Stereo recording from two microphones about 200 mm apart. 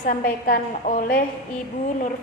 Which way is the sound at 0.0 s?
45° left (ahead or behind).